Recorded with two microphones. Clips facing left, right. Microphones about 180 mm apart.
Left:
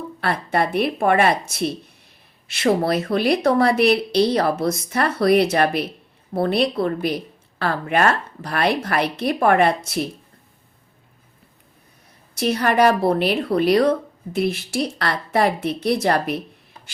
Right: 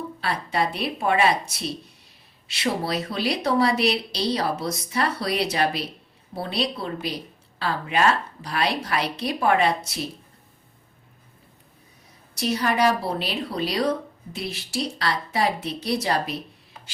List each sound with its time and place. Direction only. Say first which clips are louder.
0.2 s a woman's voice: left 4 dB; 55° left (ahead or behind)
12.4 s a woman's voice: left 5 dB; 55° left (ahead or behind)